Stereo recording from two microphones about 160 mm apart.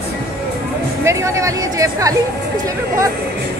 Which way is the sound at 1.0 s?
20° right (ahead or behind).